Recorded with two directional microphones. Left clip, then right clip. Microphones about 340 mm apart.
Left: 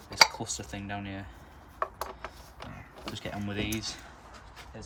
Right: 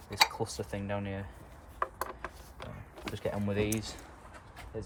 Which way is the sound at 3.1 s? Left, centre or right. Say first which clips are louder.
Right 3 dB; centre.